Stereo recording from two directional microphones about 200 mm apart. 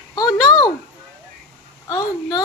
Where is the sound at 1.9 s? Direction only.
20° left (ahead or behind).